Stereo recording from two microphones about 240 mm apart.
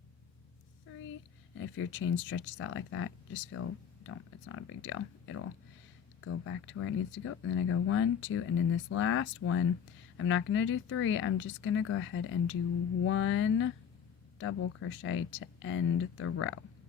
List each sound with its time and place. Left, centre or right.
1.5 s speech: left
6.2 s speech: left